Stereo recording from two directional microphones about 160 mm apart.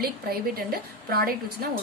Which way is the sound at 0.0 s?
70° right (ahead or behind).